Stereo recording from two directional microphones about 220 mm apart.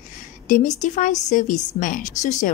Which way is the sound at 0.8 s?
35° left (ahead or behind).